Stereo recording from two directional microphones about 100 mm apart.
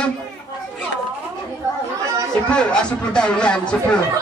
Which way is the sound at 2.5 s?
10° left (ahead or behind).